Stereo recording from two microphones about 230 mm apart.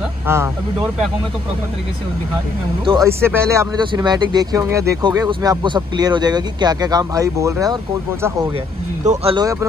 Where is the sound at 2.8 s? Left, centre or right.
Centre.